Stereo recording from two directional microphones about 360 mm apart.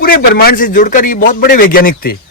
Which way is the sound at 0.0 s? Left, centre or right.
Left.